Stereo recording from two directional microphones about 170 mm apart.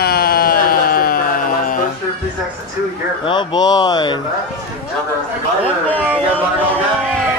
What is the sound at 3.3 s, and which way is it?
Speech, 25° left (ahead or behind).